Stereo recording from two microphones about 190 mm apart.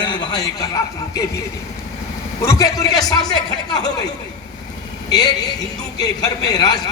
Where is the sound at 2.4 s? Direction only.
15° left (ahead or behind).